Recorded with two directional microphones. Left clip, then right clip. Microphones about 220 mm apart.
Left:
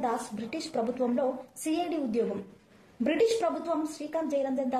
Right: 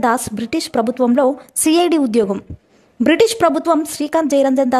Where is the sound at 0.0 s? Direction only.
50° right (ahead or behind).